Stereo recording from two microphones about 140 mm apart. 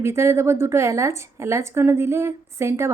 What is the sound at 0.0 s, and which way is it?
A woman's voice, 20° right (ahead or behind).